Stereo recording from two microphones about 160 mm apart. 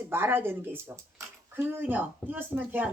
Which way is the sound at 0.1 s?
15° right (ahead or behind).